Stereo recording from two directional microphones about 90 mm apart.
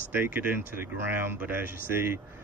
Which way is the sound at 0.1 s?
25° right (ahead or behind).